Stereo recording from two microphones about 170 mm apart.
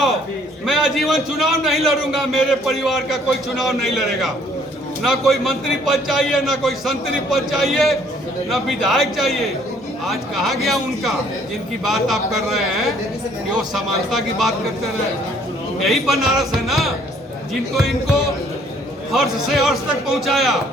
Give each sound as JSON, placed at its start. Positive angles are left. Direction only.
{"t": 0.6, "sound": "a man's voice", "side_deg": 0}
{"t": 15.8, "sound": "a man's voice", "side_deg": 0}